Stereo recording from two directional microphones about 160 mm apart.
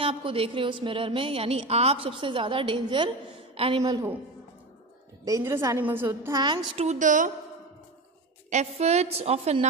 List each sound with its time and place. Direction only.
0.0 s a woman's voice: 35° right (ahead or behind)
3.8 s a woman's voice: 25° right (ahead or behind)
5.2 s a woman's voice: 20° right (ahead or behind)
6.4 s a woman's voice: 30° right (ahead or behind)
6.9 s a woman's voice: 50° right (ahead or behind)
8.5 s a woman's voice: 45° right (ahead or behind)